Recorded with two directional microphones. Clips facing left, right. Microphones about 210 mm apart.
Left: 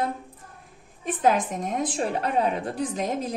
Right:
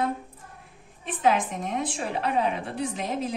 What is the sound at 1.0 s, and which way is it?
A woman's voice, 40° left (ahead or behind).